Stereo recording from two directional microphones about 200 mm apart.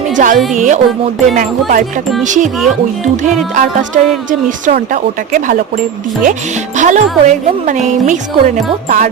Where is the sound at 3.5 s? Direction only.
40° right (ahead or behind).